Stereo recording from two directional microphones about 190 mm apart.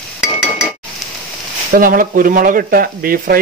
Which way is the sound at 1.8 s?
45° right (ahead or behind).